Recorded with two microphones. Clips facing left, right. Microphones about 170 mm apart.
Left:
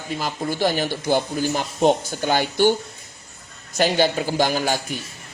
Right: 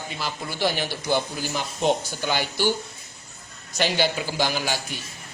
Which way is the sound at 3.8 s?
45° left (ahead or behind).